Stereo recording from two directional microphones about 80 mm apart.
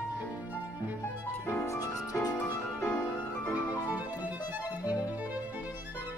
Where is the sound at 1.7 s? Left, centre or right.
Left.